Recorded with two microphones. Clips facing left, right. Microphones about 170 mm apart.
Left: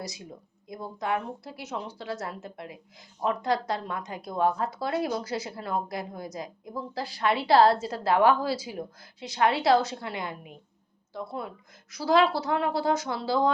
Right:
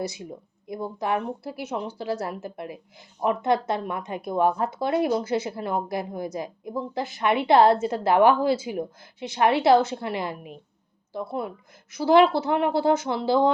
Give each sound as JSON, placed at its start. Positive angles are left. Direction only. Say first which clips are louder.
{"t": 0.0, "sound": "a woman's voice", "louder": "right 8 dB", "side_deg": -30}